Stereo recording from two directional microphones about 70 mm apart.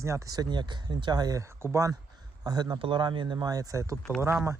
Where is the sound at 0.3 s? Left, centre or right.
Right.